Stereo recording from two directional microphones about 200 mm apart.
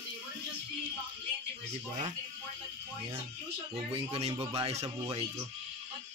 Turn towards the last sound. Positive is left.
turn(degrees=-30)  # may be behind; listen again after turning